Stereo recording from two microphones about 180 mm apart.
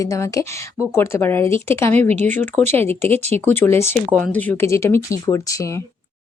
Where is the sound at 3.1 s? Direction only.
35° right (ahead or behind).